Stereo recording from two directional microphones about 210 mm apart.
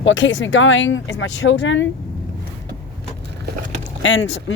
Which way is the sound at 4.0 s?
60° left (ahead or behind).